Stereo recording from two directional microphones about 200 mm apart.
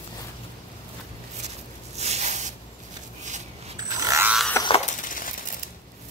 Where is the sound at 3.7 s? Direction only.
20° right (ahead or behind).